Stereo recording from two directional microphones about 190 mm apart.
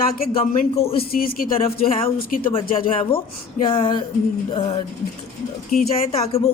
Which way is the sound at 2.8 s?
30° left (ahead or behind).